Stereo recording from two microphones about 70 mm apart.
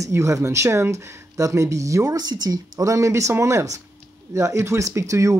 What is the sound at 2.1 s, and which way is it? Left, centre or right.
Speech, right.